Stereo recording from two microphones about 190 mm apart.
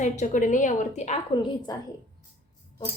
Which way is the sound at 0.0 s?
40° left (ahead or behind).